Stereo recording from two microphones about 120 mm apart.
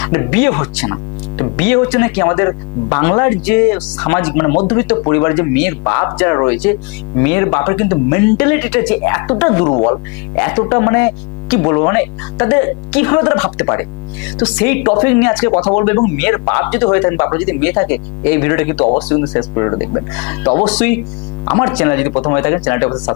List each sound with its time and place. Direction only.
0.0 s speech: 20° left (ahead or behind)
10.4 s a woman's voice: 20° left (ahead or behind)
21.4 s mains hum: 15° left (ahead or behind)
21.8 s speech: 20° left (ahead or behind)